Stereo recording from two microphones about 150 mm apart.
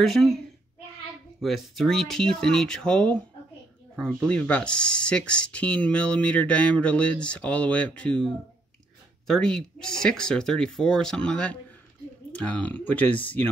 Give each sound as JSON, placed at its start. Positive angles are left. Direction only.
{"t": 0.0, "sound": "speech", "side_deg": 0}
{"t": 1.4, "sound": "speech", "side_deg": 0}
{"t": 9.3, "sound": "speech", "side_deg": 5}